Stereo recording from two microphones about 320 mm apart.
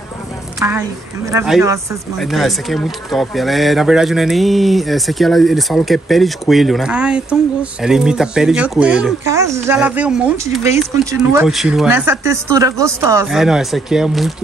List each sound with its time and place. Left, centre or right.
0.6 s a woman's voice: centre